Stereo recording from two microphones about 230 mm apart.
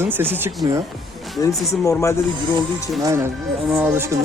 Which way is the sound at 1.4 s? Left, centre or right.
Centre.